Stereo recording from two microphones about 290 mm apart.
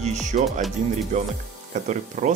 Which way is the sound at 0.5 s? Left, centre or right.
Centre.